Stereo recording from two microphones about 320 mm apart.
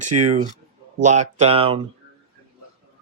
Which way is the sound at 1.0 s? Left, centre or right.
Right.